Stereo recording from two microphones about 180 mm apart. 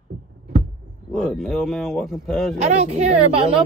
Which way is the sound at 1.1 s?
5° left (ahead or behind).